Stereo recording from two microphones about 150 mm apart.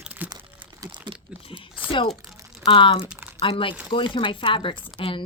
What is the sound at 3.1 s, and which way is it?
Crumpling, 10° right (ahead or behind).